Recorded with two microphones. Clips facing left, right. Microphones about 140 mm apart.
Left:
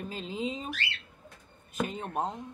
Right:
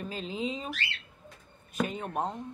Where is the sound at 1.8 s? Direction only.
30° left (ahead or behind).